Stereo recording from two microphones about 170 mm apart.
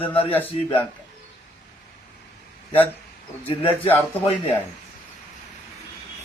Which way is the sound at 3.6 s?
10° left (ahead or behind).